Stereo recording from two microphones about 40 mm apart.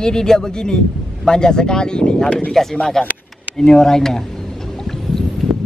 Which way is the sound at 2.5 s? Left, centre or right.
Centre.